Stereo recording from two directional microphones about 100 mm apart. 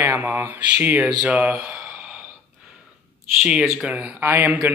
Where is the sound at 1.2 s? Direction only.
15° right (ahead or behind).